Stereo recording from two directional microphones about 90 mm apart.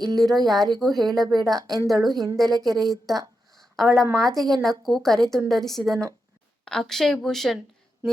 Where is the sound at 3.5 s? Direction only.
5° left (ahead or behind).